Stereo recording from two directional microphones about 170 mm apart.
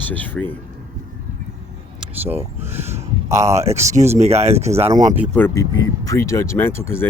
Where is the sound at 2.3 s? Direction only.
15° right (ahead or behind).